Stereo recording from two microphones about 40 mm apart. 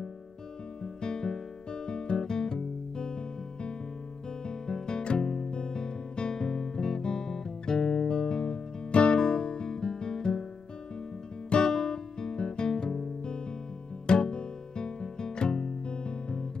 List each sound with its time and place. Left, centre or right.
1.0 s music: centre
4.6 s music: centre
5.5 s guitar: centre
9.2 s music: centre
11.5 s music: centre